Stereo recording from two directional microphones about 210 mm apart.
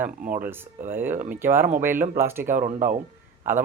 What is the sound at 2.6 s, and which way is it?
Speech, 40° right (ahead or behind).